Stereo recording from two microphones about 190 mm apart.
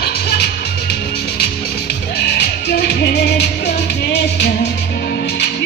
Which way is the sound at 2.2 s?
60° left (ahead or behind).